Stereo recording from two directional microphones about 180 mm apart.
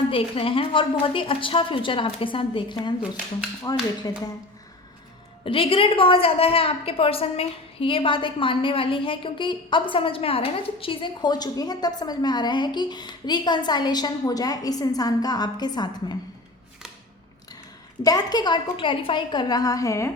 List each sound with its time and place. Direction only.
0.1 s a woman's voice: 30° left (ahead or behind)
5.5 s a woman's voice: 30° left (ahead or behind)
18.0 s a woman's voice: 20° left (ahead or behind)